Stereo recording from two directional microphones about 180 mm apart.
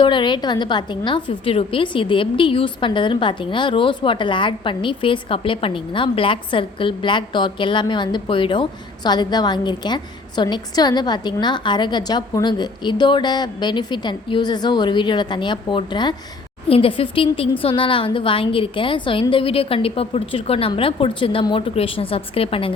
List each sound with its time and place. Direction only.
0.0 s a woman's voice: 25° left (ahead or behind)